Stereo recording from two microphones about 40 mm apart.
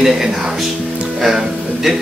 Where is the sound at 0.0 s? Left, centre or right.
Centre.